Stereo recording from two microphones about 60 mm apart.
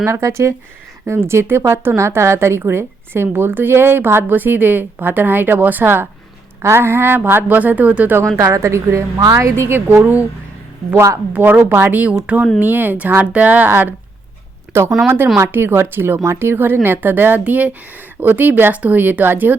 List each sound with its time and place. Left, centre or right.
0.0 s a woman's voice: right
8.4 s a woman's voice: right
9.6 s a woman's voice: right
10.9 s speech: right
11.4 s a woman's voice: right
14.7 s speech: right
15.0 s a woman's voice: right